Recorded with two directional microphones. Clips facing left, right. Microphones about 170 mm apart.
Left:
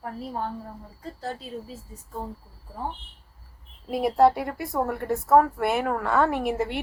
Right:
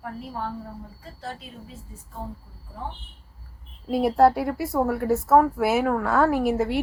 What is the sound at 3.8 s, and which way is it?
A woman's voice, centre (ahead or behind).